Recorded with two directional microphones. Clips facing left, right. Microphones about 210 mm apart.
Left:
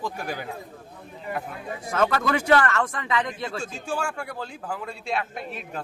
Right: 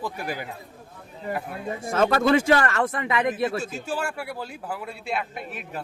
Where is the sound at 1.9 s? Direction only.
25° right (ahead or behind).